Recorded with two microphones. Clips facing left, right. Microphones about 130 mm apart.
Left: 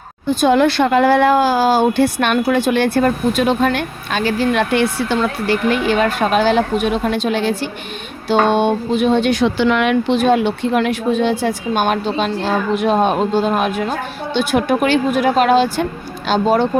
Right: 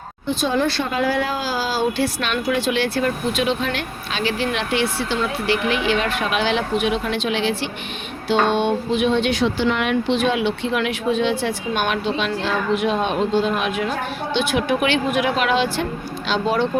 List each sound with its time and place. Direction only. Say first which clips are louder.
0.4 s speech: left 8 dB; 65° left (ahead or behind); by 9.5 s 45° left (ahead or behind)
9.6 s speech: left 5 dB; 80° left
10.1 s speech: left 5 dB; 45° left (ahead or behind)